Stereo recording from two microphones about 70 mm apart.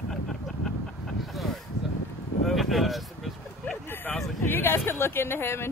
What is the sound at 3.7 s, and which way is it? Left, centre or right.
Vehicle, left.